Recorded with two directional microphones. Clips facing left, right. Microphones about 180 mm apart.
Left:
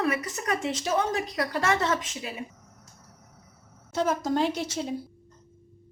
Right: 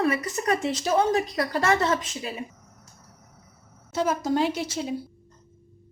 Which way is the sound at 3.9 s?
5° right (ahead or behind).